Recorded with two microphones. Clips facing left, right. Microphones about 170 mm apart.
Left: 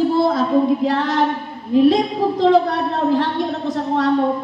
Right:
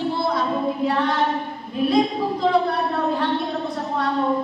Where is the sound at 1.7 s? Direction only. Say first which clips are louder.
Left 6 dB; 90° left.